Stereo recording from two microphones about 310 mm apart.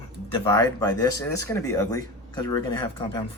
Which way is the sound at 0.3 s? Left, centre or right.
Centre.